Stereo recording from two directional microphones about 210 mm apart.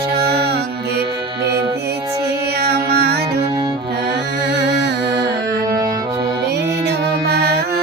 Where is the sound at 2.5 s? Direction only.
50° right (ahead or behind).